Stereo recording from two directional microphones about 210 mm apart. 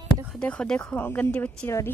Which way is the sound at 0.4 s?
5° left (ahead or behind).